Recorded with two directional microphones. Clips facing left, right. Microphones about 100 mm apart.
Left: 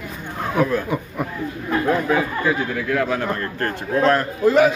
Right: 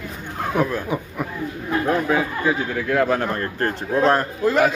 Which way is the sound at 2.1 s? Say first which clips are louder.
Left 1 dB; 15° right (ahead or behind).